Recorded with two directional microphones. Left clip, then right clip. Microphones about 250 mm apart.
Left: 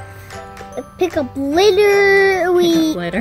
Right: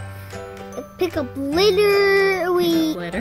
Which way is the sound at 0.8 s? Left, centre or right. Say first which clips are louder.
Left 5 dB; centre.